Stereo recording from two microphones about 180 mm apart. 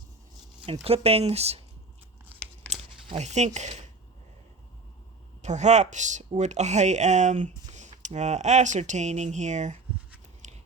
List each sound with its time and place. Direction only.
0.6 s speech: 30° right (ahead or behind)
3.1 s speech: 40° right (ahead or behind)
5.4 s speech: 40° right (ahead or behind)
10.4 s biting: 40° right (ahead or behind)